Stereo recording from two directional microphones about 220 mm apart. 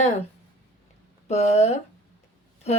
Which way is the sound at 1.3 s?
30° left (ahead or behind).